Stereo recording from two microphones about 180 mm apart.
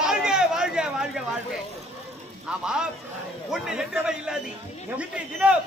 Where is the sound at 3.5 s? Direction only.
5° right (ahead or behind).